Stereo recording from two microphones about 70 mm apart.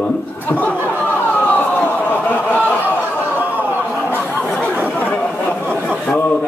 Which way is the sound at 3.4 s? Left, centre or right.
Right.